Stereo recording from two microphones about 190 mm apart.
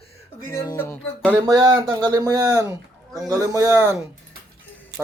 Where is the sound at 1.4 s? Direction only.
20° right (ahead or behind).